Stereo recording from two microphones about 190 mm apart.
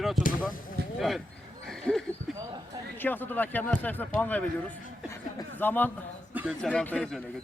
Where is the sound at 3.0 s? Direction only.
10° left (ahead or behind).